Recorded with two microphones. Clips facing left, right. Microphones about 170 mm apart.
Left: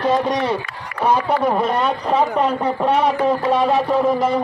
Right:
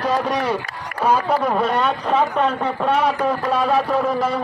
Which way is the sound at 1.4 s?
10° left (ahead or behind).